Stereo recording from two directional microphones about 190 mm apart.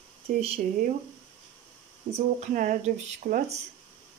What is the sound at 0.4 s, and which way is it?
Speech, 30° right (ahead or behind).